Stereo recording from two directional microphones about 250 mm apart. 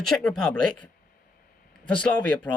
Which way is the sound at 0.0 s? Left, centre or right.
Centre.